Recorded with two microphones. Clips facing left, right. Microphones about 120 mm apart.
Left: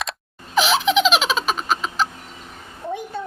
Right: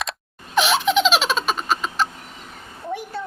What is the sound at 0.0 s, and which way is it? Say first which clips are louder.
Baby laughter: even; centre (ahead or behind).